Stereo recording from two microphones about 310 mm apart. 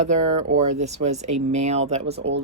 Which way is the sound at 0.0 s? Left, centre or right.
Right.